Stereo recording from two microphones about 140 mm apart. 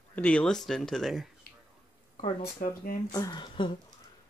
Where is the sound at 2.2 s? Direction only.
75° left (ahead or behind).